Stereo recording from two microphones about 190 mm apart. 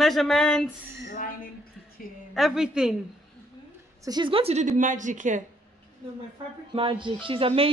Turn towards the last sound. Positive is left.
turn(degrees=-30)  # may be behind; listen again after turning